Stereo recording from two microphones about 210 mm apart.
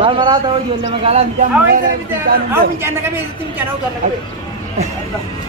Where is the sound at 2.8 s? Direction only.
10° right (ahead or behind).